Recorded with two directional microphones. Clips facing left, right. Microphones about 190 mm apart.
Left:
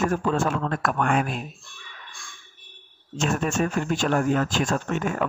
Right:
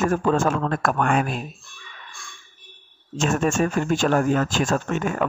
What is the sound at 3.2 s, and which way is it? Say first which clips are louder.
Speech: right 3 dB; 45° right (ahead or behind).